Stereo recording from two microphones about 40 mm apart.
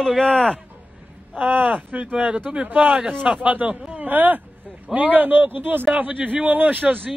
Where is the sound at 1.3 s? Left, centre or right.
Right.